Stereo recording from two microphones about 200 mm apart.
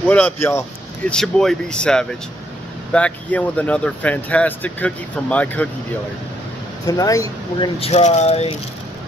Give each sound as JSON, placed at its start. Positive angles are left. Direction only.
{"t": 0.1, "sound": "speech", "side_deg": 10}
{"t": 1.1, "sound": "speech", "side_deg": 0}
{"t": 6.9, "sound": "speech", "side_deg": 15}
{"t": 7.8, "sound": "speech", "side_deg": 30}